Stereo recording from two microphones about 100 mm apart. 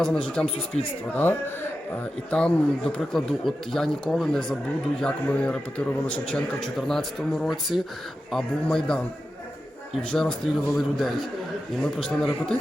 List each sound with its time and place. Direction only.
0.4 s a man's voice: 10° left (ahead or behind)
2.3 s a man's voice: 10° left (ahead or behind)
10.0 s speech: 10° left (ahead or behind)